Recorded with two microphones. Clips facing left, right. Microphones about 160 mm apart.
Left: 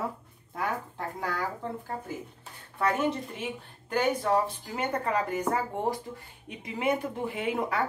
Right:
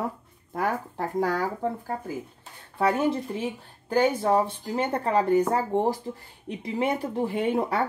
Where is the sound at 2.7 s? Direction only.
35° right (ahead or behind).